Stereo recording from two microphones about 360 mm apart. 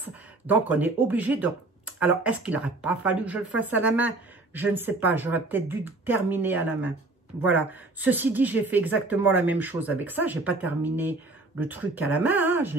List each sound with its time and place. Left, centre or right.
0.0 s a woman's voice: centre